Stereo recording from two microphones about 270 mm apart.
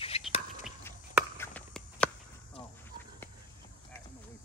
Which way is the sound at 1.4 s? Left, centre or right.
Centre.